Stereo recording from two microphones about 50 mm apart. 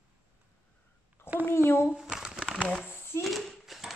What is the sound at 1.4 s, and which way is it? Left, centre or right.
Speech, left.